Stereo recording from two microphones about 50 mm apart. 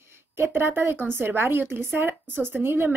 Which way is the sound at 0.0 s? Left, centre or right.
Right.